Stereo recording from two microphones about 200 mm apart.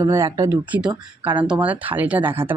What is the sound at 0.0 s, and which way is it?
Speech, 15° right (ahead or behind).